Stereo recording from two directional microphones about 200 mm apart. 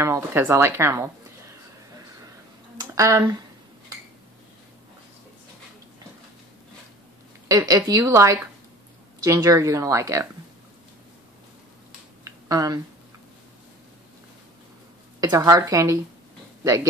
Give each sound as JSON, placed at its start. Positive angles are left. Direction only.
{"t": 0.0, "sound": "a woman's voice", "side_deg": -10}
{"t": 2.8, "sound": "speech", "side_deg": -15}
{"t": 7.4, "sound": "a woman's voice", "side_deg": -15}
{"t": 12.3, "sound": "a sound", "side_deg": -15}
{"t": 15.1, "sound": "a woman's voice", "side_deg": -15}